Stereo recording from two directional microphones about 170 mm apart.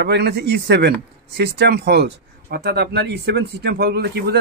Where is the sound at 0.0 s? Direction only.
75° right (ahead or behind).